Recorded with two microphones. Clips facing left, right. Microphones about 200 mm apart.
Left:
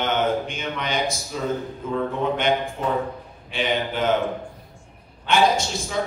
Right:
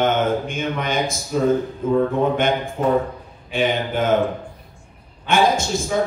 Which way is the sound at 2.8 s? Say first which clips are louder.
Right 6 dB; 50° right (ahead or behind).